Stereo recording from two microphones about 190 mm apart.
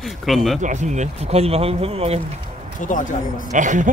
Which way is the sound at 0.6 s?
40° right (ahead or behind).